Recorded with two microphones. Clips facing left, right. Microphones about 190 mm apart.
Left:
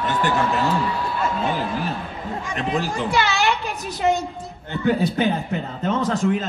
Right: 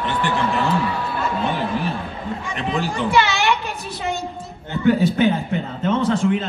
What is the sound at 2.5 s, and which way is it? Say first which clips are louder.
A woman's voice: even; 40° left (ahead or behind).